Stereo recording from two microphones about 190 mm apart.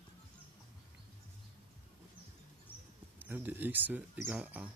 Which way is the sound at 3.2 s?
10° right (ahead or behind).